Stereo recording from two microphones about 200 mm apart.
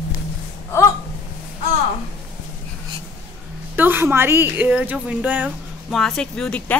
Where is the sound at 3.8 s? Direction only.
10° right (ahead or behind).